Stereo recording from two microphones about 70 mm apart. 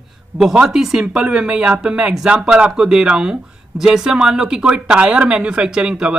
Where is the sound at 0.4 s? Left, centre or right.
Centre.